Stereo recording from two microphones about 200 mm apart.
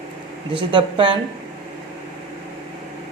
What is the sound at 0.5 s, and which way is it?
Speech, 25° right (ahead or behind).